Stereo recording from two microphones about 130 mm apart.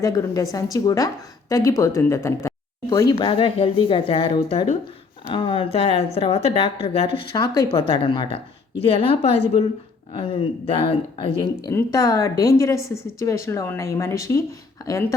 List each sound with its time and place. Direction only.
0.0 s a woman's voice: 25° left (ahead or behind)
3.2 s speech: 40° left (ahead or behind)
7.3 s a woman's voice: 30° left (ahead or behind)
7.8 s a woman's voice: 40° left (ahead or behind)
11.7 s a woman's voice: 20° left (ahead or behind)